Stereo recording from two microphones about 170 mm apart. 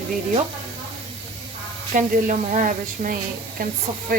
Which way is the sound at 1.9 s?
50° right (ahead or behind).